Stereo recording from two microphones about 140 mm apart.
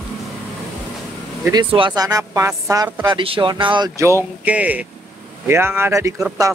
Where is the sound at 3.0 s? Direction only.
40° right (ahead or behind).